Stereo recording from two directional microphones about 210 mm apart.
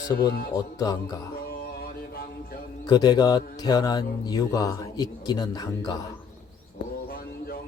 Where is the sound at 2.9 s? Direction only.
20° left (ahead or behind).